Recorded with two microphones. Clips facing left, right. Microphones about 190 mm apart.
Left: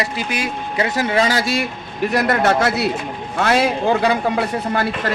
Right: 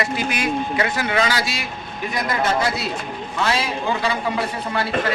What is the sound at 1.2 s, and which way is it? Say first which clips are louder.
Speech: left 5 dB; 50° left (ahead or behind).